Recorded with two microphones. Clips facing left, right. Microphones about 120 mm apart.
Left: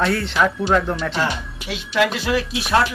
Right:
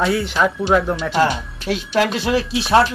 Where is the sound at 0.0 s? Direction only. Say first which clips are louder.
Right 1 dB; 5° right (ahead or behind).